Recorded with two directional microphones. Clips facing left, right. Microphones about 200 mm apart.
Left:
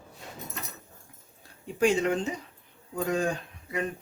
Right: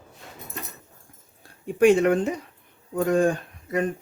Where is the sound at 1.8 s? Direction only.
60° right (ahead or behind).